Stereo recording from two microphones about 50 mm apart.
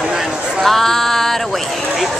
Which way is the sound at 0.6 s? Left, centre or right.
Centre.